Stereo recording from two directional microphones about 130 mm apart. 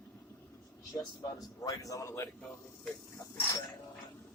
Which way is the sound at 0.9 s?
30° left (ahead or behind).